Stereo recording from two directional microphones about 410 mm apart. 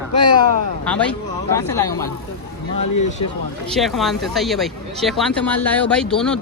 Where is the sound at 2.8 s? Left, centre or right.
Left.